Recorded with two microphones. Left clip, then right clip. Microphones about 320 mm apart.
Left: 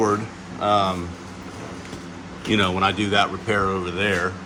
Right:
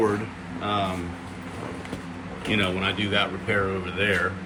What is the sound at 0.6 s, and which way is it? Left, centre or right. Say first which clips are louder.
Speech: left 7 dB; left.